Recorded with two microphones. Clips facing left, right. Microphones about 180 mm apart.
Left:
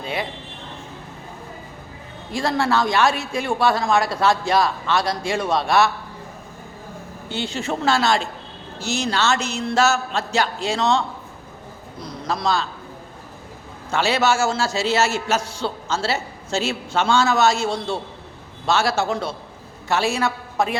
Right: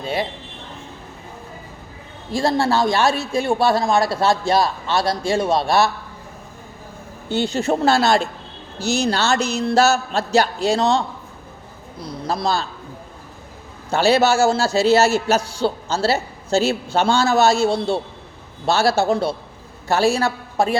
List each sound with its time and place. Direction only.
2.3 s a man's voice: 30° right (ahead or behind)
7.3 s speech: 40° right (ahead or behind)
12.3 s speech: 35° right (ahead or behind)
13.9 s speech: 35° right (ahead or behind)